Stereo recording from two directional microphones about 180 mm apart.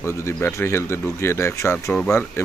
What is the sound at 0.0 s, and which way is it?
Speech, 15° left (ahead or behind).